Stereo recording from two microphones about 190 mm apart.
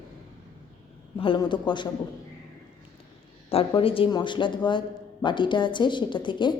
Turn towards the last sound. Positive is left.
turn(degrees=25)  # may be behind; listen again after turning